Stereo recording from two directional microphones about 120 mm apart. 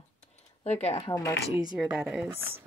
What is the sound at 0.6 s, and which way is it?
Speech, 65° left (ahead or behind).